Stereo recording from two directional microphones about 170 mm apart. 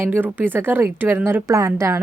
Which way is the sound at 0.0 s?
10° right (ahead or behind).